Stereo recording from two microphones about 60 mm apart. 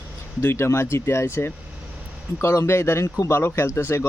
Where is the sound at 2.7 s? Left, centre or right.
Left.